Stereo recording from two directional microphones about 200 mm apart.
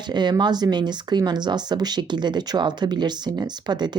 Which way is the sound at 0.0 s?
20° right (ahead or behind).